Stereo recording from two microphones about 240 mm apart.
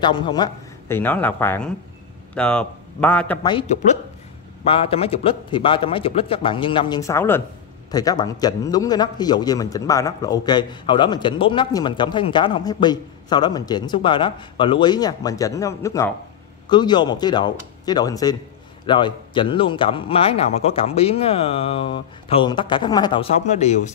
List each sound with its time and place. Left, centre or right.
0.0 s a man's voice: centre
3.4 s a man's voice: left